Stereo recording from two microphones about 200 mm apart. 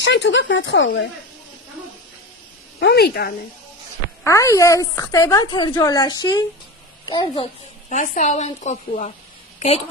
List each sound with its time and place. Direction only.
0.0 s speech: 65° left (ahead or behind)
2.8 s a woman's voice: 55° left (ahead or behind)
4.2 s a woman's voice: 15° left (ahead or behind)
7.9 s a woman's voice: 40° left (ahead or behind)